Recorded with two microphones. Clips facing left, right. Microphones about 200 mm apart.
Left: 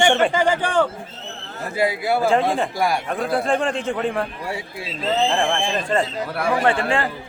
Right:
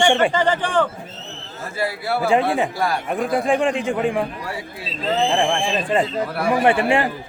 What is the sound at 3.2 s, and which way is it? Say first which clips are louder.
Speech: right 3 dB; 15° right (ahead or behind).